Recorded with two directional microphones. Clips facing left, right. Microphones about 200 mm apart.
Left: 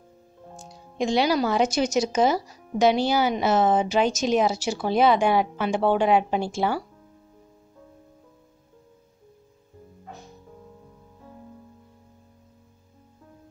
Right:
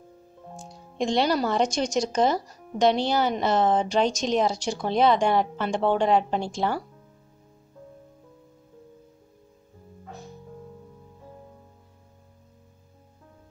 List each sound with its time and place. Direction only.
0.6 s speech: centre (ahead or behind)